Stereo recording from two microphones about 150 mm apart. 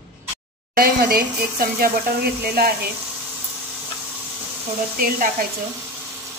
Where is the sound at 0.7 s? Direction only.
80° right.